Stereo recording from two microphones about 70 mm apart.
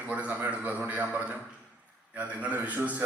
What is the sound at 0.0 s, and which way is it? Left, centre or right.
A man's voice, right.